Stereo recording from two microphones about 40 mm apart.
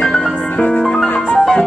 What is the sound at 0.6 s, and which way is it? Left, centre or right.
Music, left.